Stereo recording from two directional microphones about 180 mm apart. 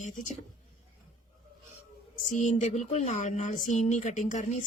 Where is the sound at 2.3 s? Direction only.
40° left (ahead or behind).